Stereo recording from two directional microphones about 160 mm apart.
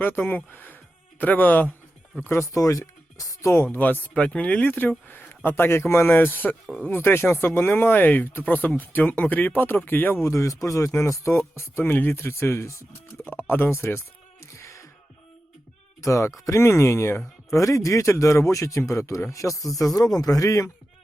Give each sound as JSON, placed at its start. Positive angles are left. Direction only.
{"t": 0.0, "sound": "speech", "side_deg": 10}
{"t": 14.4, "sound": "music", "side_deg": 20}
{"t": 16.0, "sound": "speech", "side_deg": 20}